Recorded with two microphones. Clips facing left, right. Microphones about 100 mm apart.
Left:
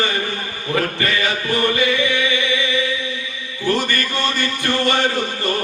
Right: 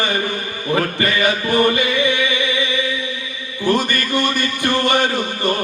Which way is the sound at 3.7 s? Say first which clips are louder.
Right 2 dB; 15° right (ahead or behind).